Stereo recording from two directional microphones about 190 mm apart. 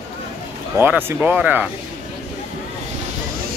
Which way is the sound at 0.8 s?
10° right (ahead or behind).